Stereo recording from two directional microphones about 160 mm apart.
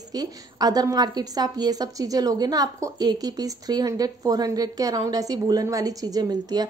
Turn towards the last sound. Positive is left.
turn(degrees=-25)  # may be behind; listen again after turning